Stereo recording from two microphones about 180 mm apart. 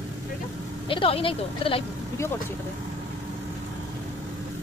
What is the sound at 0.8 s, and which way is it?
Speech, 30° left (ahead or behind).